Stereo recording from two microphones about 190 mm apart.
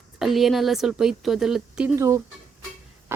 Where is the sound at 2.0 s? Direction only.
15° right (ahead or behind).